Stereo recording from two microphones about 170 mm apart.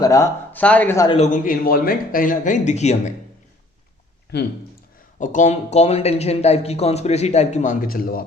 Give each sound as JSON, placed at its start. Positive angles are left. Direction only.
{"t": 0.0, "sound": "speech", "side_deg": 20}
{"t": 0.6, "sound": "speech", "side_deg": 10}
{"t": 1.0, "sound": "a man's voice", "side_deg": 40}
{"t": 5.2, "sound": "speech", "side_deg": 45}